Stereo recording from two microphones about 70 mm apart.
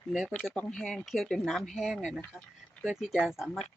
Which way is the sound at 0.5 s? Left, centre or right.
Centre.